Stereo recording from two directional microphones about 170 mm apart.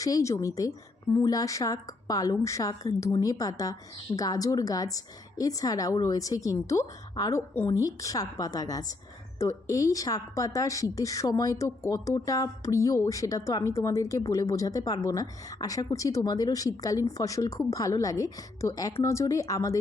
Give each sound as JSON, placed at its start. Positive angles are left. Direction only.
{"t": 0.0, "sound": "a woman's voice", "side_deg": 20}